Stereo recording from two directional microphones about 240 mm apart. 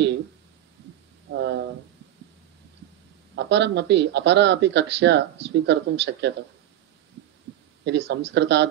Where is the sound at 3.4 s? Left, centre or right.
Right.